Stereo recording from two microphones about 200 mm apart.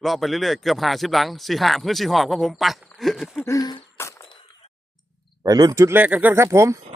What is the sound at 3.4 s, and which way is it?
Throat clearing, 20° left (ahead or behind).